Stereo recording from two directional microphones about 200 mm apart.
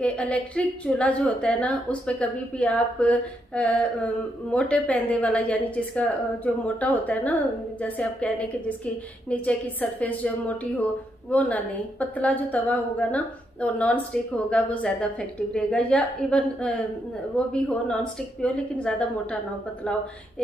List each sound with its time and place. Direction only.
0.0 s a woman's voice: 5° left (ahead or behind)